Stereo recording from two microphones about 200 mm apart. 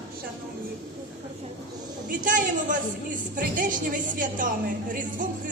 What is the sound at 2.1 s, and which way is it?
Speech, 40° right (ahead or behind).